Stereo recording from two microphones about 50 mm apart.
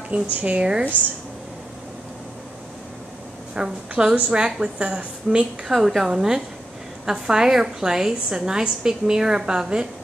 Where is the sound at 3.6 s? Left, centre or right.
Centre.